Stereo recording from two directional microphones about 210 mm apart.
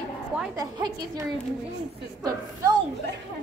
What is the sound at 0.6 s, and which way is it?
Speech, 15° right (ahead or behind).